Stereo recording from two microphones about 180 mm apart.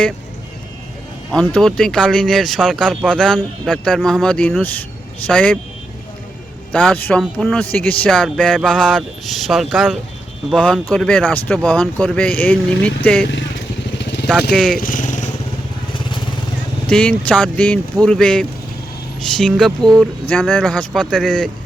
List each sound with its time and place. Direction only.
1.3 s speech: 5° left (ahead or behind)
6.7 s speech: 10° left (ahead or behind)
13.2 s speech: 80° left
14.0 s vehicle: 70° left (ahead or behind)
14.5 s speech: 5° left (ahead or behind)
14.8 s motorcycle: 45° left (ahead or behind)
15.9 s vehicle: 25° left (ahead or behind)
16.9 s speech: 5° left (ahead or behind)